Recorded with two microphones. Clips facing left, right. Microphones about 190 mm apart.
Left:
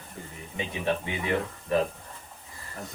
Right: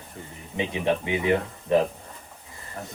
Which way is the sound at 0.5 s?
20° right (ahead or behind).